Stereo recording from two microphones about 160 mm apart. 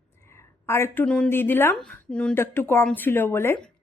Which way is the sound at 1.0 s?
5° left (ahead or behind).